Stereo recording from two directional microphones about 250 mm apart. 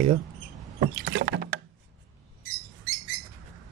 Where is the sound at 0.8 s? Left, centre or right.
Right.